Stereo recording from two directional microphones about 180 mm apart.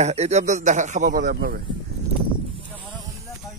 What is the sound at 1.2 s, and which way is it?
Speech, 65° right (ahead or behind).